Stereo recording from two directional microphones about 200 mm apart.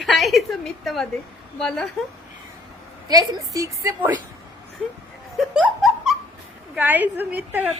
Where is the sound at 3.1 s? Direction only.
20° right (ahead or behind).